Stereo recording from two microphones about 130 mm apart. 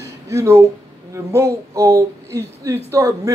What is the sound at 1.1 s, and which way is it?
Speech, 20° right (ahead or behind).